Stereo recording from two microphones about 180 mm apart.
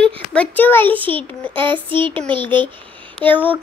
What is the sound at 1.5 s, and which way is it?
Child singing, 25° right (ahead or behind).